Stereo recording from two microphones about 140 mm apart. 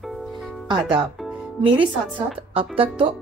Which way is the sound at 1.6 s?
35° right (ahead or behind).